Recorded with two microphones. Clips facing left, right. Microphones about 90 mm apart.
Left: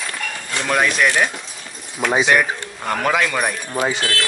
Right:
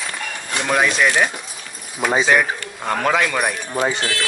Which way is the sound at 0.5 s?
15° right (ahead or behind).